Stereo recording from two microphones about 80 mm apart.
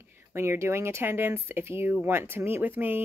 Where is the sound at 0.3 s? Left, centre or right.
Right.